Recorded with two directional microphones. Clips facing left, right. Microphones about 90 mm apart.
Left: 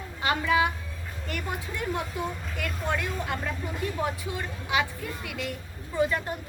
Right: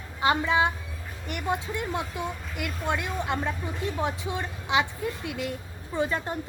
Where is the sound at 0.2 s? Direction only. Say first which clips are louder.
Right 2 dB; 25° right (ahead or behind).